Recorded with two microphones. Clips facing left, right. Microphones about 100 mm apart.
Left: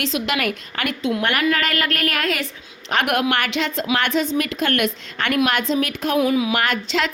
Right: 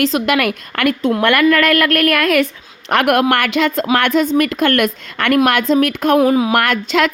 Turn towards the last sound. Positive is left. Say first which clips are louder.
# right 6 dB
turn(degrees=-55)  # may be behind; listen again after turning